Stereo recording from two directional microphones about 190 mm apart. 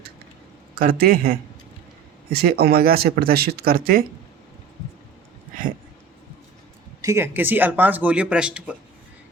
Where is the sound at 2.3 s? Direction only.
55° right (ahead or behind).